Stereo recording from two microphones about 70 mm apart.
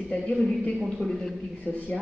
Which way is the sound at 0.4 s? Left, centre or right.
Centre.